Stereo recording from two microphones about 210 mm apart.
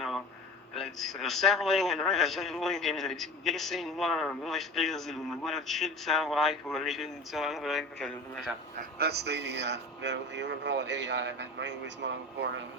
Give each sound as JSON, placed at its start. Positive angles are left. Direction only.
{"t": 0.7, "sound": "a man's voice", "side_deg": 0}
{"t": 8.8, "sound": "speech", "side_deg": -50}